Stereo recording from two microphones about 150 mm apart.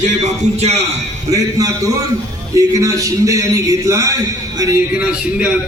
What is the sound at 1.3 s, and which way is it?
A man's voice, 25° right (ahead or behind).